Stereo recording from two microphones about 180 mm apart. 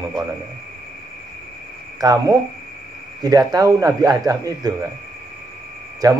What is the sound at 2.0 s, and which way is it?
Speech, 20° right (ahead or behind).